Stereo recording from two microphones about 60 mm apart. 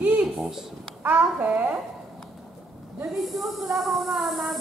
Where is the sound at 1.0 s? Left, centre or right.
Right.